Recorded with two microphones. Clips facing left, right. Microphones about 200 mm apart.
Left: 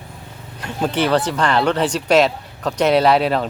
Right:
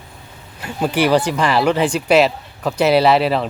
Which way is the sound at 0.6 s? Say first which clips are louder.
Right 2 dB; 5° right (ahead or behind).